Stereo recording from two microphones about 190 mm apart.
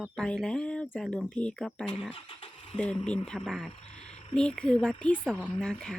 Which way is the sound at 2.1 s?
25° left (ahead or behind).